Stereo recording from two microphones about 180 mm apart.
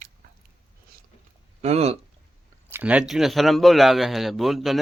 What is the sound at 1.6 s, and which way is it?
Speech, 35° right (ahead or behind).